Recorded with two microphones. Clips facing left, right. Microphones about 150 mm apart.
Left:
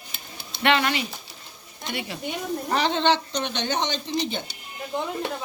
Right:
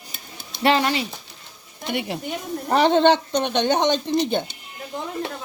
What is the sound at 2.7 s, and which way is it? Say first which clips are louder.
Speech: right 7 dB; 50° right (ahead or behind).